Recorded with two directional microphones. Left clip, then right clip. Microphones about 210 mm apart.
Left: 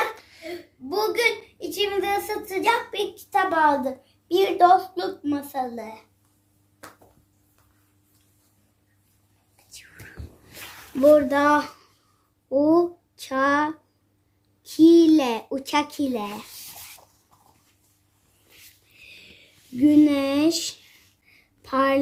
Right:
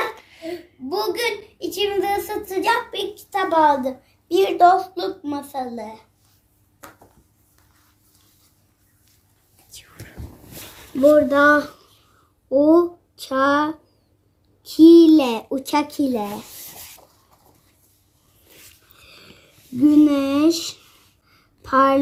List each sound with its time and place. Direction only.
0.2 s a woman's voice: 5° left (ahead or behind)
11.0 s a child's voice: 5° left (ahead or behind)
14.8 s a child's voice: centre (ahead or behind)
19.0 s a sound: centre (ahead or behind)